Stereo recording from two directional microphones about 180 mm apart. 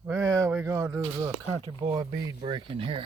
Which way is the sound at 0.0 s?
15° right (ahead or behind).